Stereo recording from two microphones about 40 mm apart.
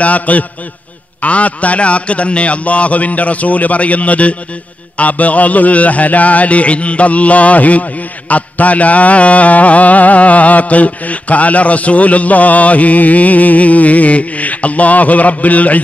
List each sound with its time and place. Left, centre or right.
0.0 s mantra: left